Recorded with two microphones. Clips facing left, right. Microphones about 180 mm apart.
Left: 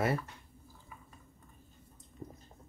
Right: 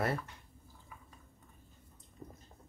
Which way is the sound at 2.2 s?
10° left (ahead or behind).